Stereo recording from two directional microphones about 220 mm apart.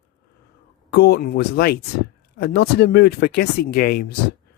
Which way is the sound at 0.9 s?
50° left (ahead or behind).